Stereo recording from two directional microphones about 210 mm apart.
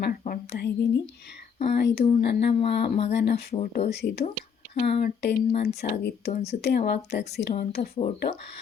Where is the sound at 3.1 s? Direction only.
55° left (ahead or behind).